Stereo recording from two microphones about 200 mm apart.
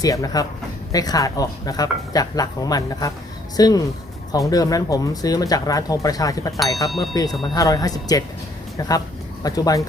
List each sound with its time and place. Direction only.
0.0 s speech: 15° left (ahead or behind)
7.3 s speech: centre (ahead or behind)
7.5 s speech: 15° left (ahead or behind)
9.4 s speech: 20° left (ahead or behind)